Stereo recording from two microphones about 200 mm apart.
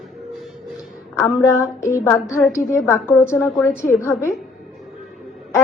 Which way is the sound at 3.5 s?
Centre (ahead or behind).